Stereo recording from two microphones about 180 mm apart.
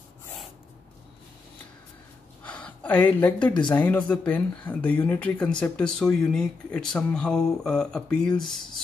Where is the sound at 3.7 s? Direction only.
10° left (ahead or behind).